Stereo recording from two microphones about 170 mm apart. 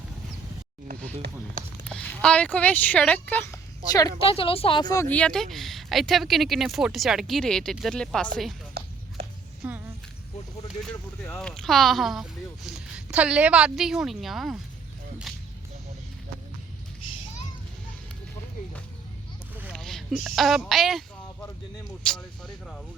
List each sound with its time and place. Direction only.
1.9 s speech: 5° left (ahead or behind)
4.2 s a woman's voice: 30° left (ahead or behind)
5.0 s speech: 5° left (ahead or behind)
9.6 s speech: 10° right (ahead or behind)
10.8 s speech: 5° left (ahead or behind)
19.7 s speech: centre (ahead or behind)
22.0 s speech: 5° left (ahead or behind)